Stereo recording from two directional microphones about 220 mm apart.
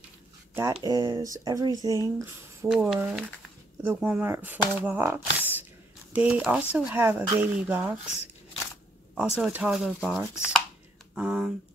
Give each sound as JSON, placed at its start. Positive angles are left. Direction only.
{"t": 0.8, "sound": "speech", "side_deg": -20}
{"t": 9.1, "sound": "speech", "side_deg": -5}